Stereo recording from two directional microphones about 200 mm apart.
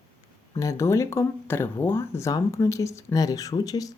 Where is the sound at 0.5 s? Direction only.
15° left (ahead or behind).